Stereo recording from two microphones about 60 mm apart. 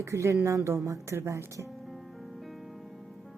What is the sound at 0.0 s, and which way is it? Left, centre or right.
A woman's voice, right.